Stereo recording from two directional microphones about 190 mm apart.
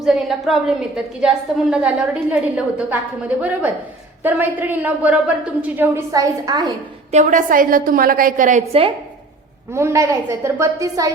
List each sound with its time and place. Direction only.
0.0 s a woman's voice: centre (ahead or behind); by 6.7 s 20° right (ahead or behind)
7.1 s a woman's voice: 40° right (ahead or behind)
9.7 s a woman's voice: 15° right (ahead or behind)